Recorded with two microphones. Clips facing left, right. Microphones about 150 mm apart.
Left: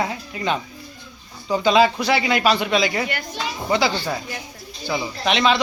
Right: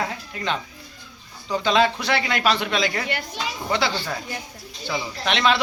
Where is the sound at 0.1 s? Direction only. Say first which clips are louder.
Left 3 dB; 10° left (ahead or behind).